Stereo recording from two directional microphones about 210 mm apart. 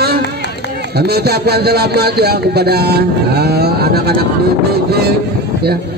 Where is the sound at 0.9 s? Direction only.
50° right (ahead or behind).